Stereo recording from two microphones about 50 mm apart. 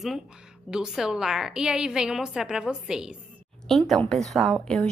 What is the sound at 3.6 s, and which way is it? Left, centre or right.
Speech, centre.